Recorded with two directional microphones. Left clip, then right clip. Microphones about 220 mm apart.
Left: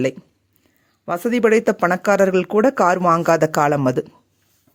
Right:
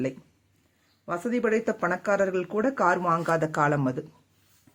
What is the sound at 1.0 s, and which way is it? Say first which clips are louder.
Speech: left 10 dB; 45° left (ahead or behind).